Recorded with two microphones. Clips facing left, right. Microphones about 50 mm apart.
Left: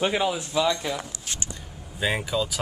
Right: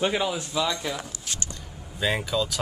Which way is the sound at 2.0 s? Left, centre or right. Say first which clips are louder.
Even; centre.